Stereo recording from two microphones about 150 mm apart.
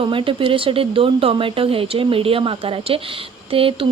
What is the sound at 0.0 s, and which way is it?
Speech, 35° right (ahead or behind).